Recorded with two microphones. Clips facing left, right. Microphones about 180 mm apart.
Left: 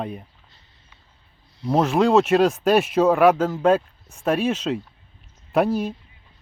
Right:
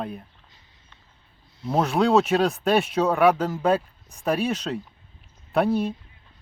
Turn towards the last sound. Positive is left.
turn(degrees=0)  # may be behind; listen again after turning